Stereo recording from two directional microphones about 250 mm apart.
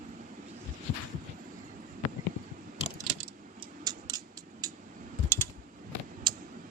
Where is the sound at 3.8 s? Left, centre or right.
Centre.